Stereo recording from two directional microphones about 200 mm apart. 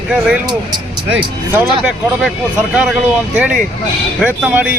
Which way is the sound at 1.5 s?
5° right (ahead or behind).